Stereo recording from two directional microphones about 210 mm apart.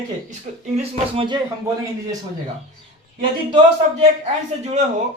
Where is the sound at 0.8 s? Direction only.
25° right (ahead or behind).